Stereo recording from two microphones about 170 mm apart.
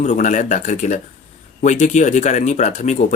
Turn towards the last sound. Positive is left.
turn(degrees=40)  # may be behind; listen again after turning